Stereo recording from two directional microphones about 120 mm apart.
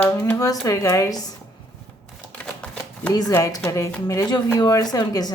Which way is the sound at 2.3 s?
10° left (ahead or behind).